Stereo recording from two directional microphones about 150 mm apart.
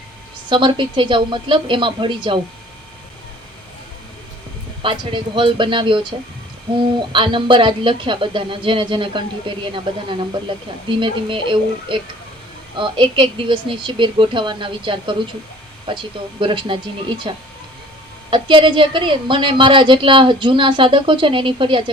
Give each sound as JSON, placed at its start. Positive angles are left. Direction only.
{"t": 0.5, "sound": "speech", "side_deg": -35}
{"t": 4.8, "sound": "speech", "side_deg": -35}